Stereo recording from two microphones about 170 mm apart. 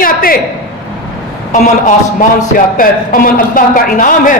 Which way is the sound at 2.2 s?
55° left (ahead or behind).